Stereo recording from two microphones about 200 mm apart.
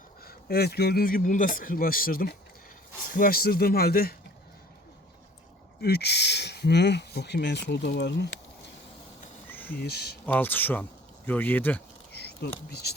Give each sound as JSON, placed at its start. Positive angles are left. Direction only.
{"t": 0.3, "sound": "speech", "side_deg": 50}
{"t": 5.8, "sound": "speech", "side_deg": 55}
{"t": 9.5, "sound": "a sound", "side_deg": 10}
{"t": 9.7, "sound": "speech", "side_deg": 55}
{"t": 10.2, "sound": "speech", "side_deg": 10}
{"t": 12.1, "sound": "speech", "side_deg": 55}